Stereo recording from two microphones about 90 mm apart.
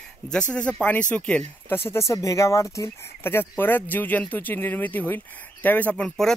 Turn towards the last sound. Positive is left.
turn(degrees=5)  # may be behind; listen again after turning